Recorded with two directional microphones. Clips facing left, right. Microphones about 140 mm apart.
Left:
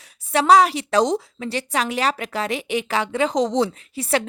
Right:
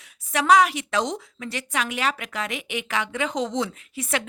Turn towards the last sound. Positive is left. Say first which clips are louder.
# left 6 dB
turn(degrees=35)  # may be behind; listen again after turning